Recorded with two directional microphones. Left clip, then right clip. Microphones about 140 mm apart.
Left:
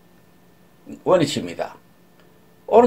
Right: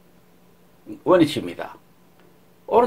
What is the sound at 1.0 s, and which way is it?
Speech, 30° right (ahead or behind).